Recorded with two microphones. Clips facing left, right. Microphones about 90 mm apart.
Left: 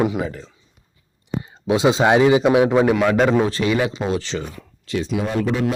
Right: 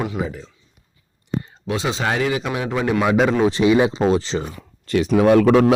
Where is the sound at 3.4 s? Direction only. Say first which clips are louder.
Right 4 dB; 20° right (ahead or behind).